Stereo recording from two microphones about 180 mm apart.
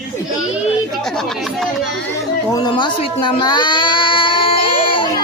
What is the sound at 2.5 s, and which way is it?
Speech, 25° left (ahead or behind).